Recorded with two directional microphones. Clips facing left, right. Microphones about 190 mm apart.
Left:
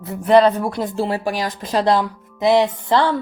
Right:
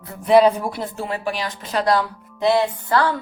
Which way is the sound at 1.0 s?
40° left (ahead or behind).